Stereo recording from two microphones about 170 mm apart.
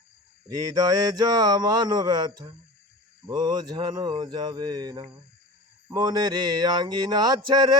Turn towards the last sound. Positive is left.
turn(degrees=-25)  # may be behind; listen again after turning